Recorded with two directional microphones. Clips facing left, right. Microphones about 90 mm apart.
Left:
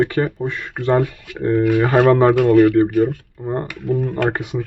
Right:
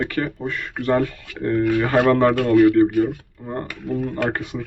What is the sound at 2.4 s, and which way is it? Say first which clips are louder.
Speech: left 4 dB; 5° left (ahead or behind).